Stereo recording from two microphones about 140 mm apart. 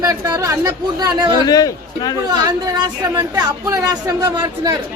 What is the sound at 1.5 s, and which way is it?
Speech, 25° left (ahead or behind).